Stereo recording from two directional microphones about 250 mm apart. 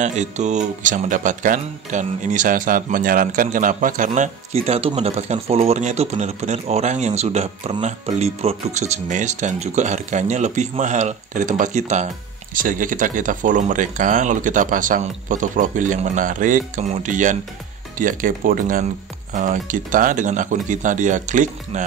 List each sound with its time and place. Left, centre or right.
0.0 s speech: right